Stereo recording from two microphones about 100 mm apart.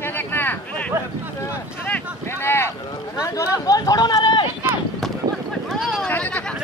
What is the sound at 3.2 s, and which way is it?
Chatter, 35° left (ahead or behind).